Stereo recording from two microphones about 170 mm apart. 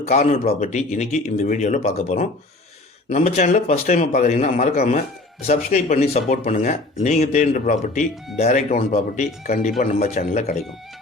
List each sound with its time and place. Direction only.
0.1 s speech: 40° left (ahead or behind)